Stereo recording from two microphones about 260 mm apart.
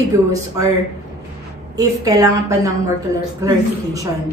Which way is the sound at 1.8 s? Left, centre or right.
Centre.